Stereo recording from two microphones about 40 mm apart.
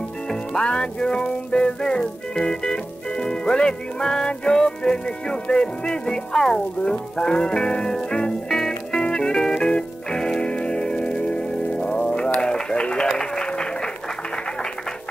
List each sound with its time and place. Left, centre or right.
0.3 s music: centre